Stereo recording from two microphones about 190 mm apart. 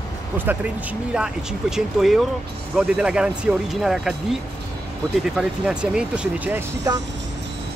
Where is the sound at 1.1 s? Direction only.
5° right (ahead or behind).